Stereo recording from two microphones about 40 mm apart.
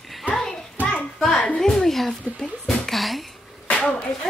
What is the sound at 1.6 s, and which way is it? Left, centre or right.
Speech, centre.